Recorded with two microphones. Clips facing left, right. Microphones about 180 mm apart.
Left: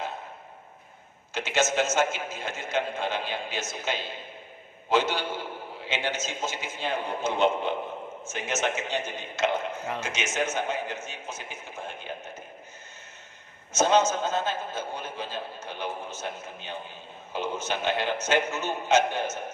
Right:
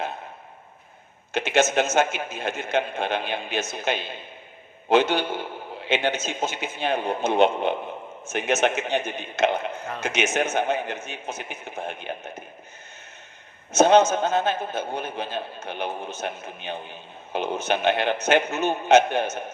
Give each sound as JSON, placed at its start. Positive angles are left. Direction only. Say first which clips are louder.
{"t": 1.3, "sound": "a man's voice", "louder": "right 5 dB", "side_deg": -60}
{"t": 13.7, "sound": "a man's voice", "louder": "right 6 dB", "side_deg": -60}